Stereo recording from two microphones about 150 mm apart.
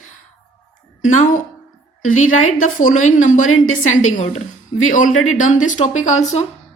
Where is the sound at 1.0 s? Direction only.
60° left (ahead or behind).